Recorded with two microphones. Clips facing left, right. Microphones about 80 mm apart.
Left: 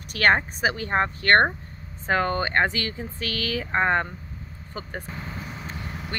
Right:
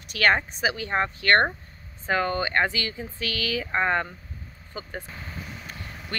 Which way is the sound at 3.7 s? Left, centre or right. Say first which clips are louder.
Left 2 dB; left.